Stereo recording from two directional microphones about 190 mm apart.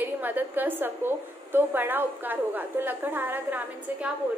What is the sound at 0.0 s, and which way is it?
A woman's voice, 10° right (ahead or behind).